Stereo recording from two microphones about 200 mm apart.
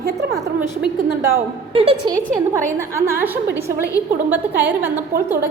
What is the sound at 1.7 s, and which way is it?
Speech, 30° right (ahead or behind).